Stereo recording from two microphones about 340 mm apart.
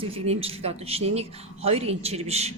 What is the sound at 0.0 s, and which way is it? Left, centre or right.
Speech, centre.